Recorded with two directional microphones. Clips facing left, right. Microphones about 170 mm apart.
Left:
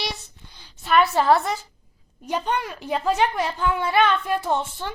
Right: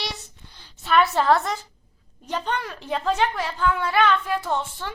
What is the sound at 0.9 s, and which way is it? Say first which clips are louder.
A woman's voice: left 1 dB; 5° left (ahead or behind).